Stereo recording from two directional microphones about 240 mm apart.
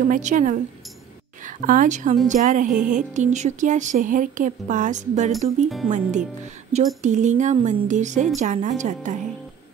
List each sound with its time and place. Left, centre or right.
0.1 s speech: right